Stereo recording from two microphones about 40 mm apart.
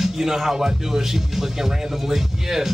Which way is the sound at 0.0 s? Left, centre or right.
Centre.